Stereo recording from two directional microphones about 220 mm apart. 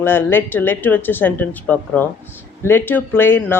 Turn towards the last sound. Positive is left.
turn(degrees=10)  # may be behind; listen again after turning